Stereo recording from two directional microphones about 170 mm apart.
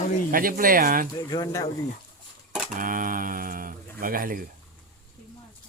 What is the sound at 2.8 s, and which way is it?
Speech, 55° right (ahead or behind).